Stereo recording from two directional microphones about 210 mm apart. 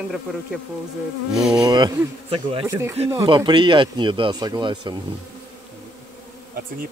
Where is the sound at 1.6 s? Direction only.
20° right (ahead or behind).